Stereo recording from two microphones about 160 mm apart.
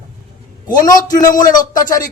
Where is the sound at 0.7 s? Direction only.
25° left (ahead or behind).